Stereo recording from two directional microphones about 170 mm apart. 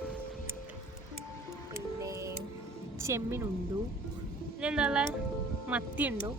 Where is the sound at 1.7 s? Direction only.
15° right (ahead or behind).